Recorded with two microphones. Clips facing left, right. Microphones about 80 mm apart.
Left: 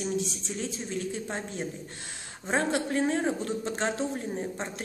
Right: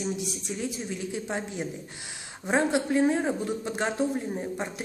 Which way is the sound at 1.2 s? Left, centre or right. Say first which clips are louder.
Right 2 dB; centre.